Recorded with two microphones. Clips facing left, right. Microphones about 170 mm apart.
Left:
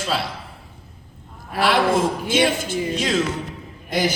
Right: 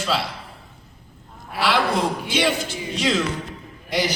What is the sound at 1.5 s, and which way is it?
Speech, 50° left (ahead or behind).